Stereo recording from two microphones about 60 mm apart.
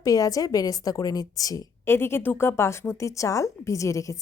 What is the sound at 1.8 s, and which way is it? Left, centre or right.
Speech, left.